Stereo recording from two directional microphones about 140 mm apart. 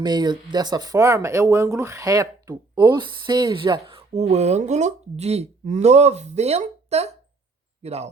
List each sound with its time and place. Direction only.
0.0 s speech: 30° right (ahead or behind); by 8.1 s 50° right (ahead or behind)